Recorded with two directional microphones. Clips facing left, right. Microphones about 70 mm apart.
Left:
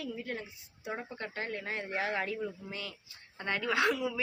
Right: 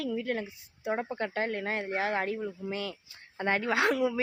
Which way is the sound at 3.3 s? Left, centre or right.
Right.